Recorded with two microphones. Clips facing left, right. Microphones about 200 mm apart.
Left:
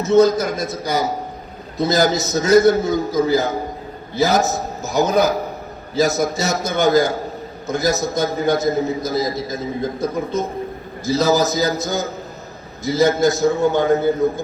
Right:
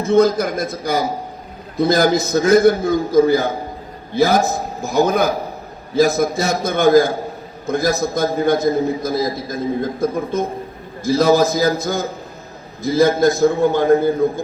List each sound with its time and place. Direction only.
0.0 s a man's voice: 55° right (ahead or behind)